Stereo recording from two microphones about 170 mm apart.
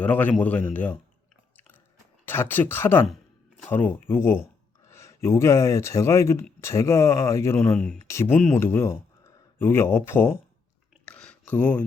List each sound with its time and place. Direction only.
0.0 s speech: 10° left (ahead or behind)
2.2 s speech: 10° left (ahead or behind)
11.0 s a sound: 5° left (ahead or behind)